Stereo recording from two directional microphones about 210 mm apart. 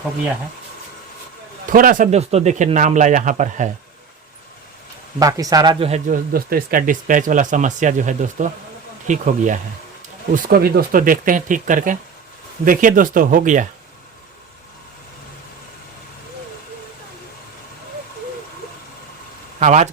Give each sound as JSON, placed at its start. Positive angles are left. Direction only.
{"t": 1.6, "sound": "speech", "side_deg": -40}
{"t": 5.2, "sound": "speech", "side_deg": -15}
{"t": 5.9, "sound": "speech", "side_deg": -40}
{"t": 19.5, "sound": "speech", "side_deg": -35}